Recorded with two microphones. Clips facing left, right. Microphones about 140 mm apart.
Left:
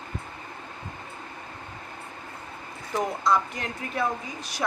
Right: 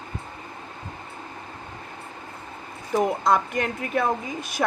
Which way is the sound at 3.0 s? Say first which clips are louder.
Right 3 dB; 55° right (ahead or behind).